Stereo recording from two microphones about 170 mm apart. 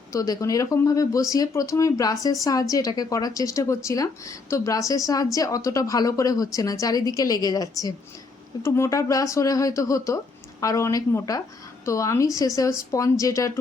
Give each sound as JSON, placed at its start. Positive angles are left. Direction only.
{"t": 0.1, "sound": "speech", "side_deg": 20}